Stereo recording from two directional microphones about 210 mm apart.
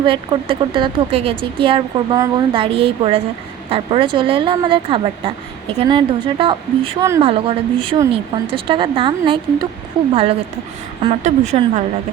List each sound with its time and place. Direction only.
0.0 s speech: 25° right (ahead or behind)
11.0 s speech: 30° right (ahead or behind)